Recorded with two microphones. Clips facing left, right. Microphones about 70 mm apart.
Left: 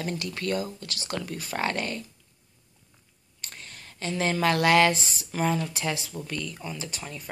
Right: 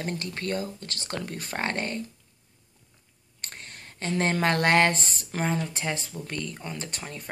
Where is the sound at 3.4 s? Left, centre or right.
Right.